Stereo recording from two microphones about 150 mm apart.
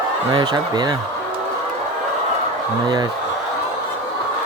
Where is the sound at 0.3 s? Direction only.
30° right (ahead or behind).